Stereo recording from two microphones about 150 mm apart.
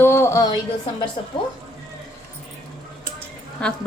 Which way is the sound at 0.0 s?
15° left (ahead or behind).